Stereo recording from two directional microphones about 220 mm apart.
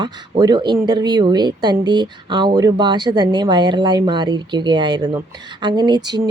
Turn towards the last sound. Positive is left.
turn(degrees=-20)  # may be behind; listen again after turning